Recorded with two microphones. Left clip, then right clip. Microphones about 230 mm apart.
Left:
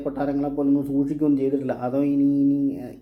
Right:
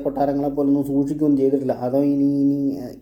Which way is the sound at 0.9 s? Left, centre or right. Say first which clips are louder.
Right 2 dB; right.